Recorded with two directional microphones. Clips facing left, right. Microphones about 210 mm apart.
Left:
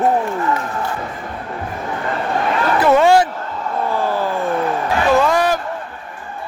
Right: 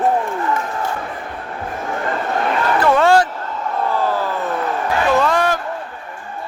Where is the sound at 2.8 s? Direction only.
10° left (ahead or behind).